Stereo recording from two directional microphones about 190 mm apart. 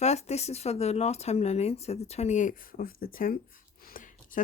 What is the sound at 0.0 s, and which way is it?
Speech, 35° left (ahead or behind).